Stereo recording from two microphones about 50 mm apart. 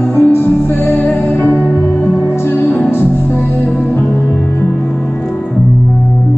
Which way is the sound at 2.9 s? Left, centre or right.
Left.